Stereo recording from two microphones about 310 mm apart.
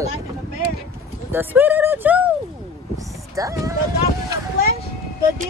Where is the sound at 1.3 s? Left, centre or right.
Centre.